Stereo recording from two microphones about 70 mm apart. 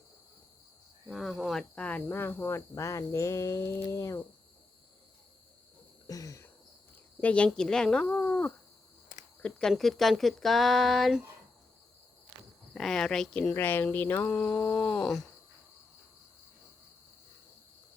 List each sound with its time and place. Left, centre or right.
1.0 s speech: centre
1.7 s speech: centre
2.0 s speech: left
2.7 s speech: left
6.1 s a sound: left
7.2 s speech: centre
9.4 s speech: centre
12.7 s speech: centre
13.5 s speech: left
14.9 s speech: centre